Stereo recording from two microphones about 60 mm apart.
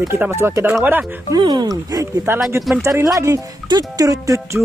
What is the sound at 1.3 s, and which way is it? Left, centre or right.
Speech, right.